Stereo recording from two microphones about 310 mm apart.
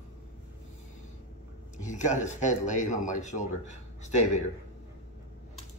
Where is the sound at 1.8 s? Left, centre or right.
Left.